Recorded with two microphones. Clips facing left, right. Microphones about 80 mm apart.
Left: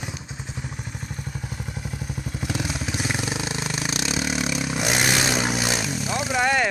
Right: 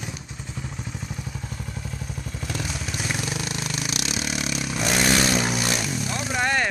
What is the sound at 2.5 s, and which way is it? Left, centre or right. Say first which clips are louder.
Vehicle: left 3 dB; centre.